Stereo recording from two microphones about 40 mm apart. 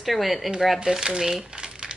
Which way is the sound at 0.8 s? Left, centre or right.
Centre.